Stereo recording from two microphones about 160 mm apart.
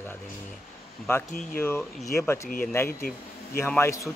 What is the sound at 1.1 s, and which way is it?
Speech, 15° left (ahead or behind).